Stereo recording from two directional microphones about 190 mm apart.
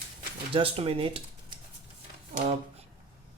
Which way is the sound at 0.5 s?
30° right (ahead or behind).